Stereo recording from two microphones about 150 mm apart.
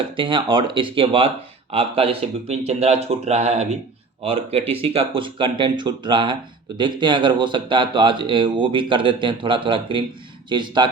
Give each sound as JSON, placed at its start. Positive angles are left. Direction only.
{"t": 0.2, "sound": "speech", "side_deg": -35}